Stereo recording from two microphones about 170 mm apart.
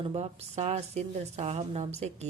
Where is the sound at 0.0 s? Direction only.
35° right (ahead or behind).